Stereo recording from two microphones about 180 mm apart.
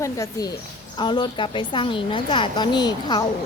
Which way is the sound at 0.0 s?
20° left (ahead or behind).